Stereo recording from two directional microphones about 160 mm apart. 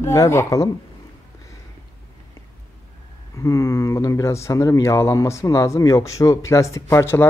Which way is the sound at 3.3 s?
20° left (ahead or behind).